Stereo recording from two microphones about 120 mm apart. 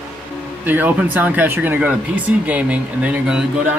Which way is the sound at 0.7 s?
15° right (ahead or behind).